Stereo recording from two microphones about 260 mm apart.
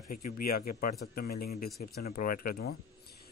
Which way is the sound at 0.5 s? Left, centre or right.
Left.